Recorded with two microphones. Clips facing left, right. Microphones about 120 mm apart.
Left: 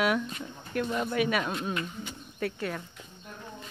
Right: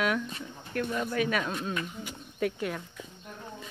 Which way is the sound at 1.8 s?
10° right (ahead or behind).